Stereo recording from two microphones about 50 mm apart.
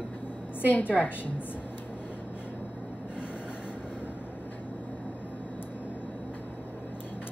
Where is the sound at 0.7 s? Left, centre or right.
Left.